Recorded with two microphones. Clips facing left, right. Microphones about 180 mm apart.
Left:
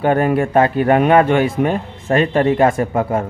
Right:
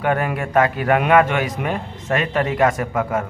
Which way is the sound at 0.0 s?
30° left (ahead or behind).